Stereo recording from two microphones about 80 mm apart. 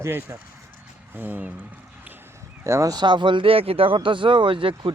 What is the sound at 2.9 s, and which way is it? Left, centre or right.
Speech, right.